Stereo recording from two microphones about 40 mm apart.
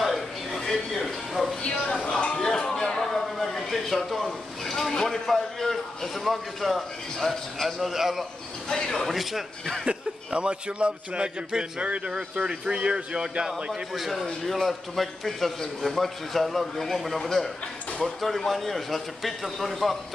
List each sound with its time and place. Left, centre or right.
0.0 s a sound: centre
1.6 s a woman's voice: left
1.9 s a sound: centre
3.0 s a sound: centre
4.7 s a man's voice: centre
8.6 s speech: centre
9.0 s a man's voice: centre
9.8 s a man's voice: right
14.1 s a man's voice: centre
18.5 s a man's voice: centre